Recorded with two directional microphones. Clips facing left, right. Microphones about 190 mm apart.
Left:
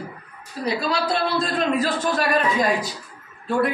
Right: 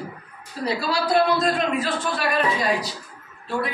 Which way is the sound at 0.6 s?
20° left (ahead or behind).